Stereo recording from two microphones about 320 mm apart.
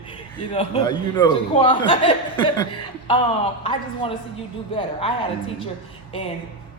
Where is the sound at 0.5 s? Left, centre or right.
Centre.